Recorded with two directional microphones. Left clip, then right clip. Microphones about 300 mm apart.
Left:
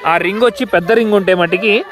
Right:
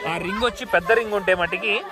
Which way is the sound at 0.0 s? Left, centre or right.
Left.